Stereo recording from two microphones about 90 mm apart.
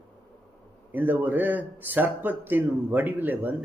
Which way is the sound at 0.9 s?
20° right (ahead or behind).